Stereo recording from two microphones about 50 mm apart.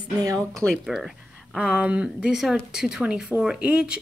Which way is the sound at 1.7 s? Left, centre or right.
Right.